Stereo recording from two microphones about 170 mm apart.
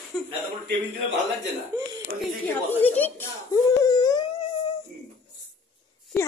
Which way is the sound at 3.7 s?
25° left (ahead or behind).